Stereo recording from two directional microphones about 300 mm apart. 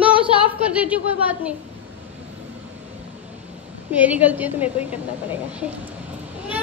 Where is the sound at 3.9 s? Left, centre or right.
Centre.